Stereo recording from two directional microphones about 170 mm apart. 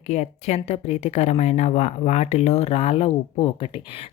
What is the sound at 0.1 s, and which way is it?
Speech, 40° left (ahead or behind).